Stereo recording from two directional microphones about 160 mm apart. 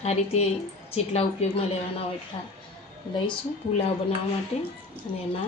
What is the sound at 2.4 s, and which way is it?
Speech, 35° left (ahead or behind).